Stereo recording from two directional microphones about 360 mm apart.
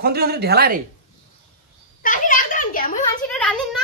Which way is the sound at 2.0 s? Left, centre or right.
Left.